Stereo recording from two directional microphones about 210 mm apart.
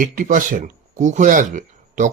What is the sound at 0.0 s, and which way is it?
A man's voice, 40° right (ahead or behind).